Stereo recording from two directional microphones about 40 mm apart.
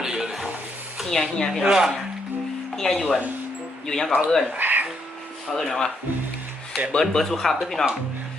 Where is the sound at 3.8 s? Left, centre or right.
Centre.